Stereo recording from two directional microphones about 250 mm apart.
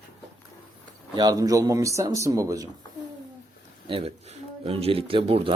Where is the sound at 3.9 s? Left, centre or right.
Right.